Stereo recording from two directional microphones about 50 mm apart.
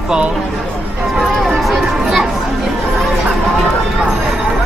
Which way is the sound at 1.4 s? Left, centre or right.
Centre.